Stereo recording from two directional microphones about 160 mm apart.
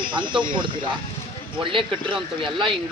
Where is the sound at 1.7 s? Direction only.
30° right (ahead or behind).